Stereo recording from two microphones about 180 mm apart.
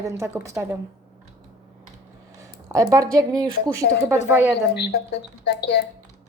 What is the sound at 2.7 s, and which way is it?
Speech, 20° right (ahead or behind).